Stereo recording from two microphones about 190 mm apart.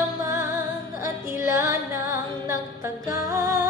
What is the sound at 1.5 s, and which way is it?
Music, 15° right (ahead or behind).